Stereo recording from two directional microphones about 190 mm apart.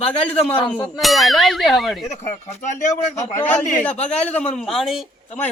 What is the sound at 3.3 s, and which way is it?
Speech, 10° left (ahead or behind).